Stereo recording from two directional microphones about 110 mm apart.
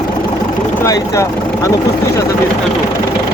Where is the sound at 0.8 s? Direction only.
30° left (ahead or behind).